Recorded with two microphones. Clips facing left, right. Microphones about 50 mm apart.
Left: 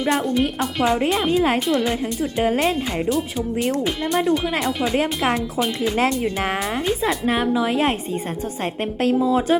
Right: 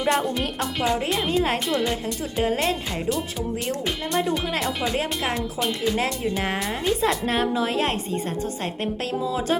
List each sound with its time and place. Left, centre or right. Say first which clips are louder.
0.0 s a woman's voice: left 3 dB; centre
4.9 s a woman's voice: left 5 dB; centre
5.5 s a woman's voice: left 3 dB; centre
6.6 s a woman's voice: left 1 dB; centre
8.6 s a woman's voice: left 6 dB; left